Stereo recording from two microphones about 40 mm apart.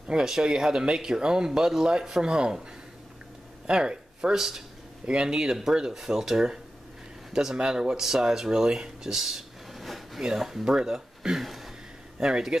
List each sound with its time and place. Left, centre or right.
0.1 s speech: centre
3.6 s speech: right
5.0 s speech: right
8.0 s speech: centre
11.3 s a sound: centre
12.2 s speech: centre